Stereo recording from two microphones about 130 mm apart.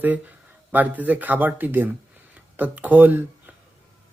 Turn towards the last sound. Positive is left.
turn(degrees=-15)  # may be behind; listen again after turning